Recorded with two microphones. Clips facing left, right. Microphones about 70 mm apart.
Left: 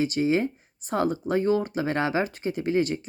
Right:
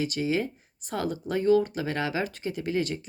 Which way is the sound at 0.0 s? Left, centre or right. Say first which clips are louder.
Left 4 dB; left.